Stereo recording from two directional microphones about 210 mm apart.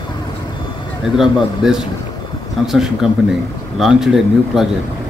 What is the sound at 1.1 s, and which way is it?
A man's voice, 5° right (ahead or behind).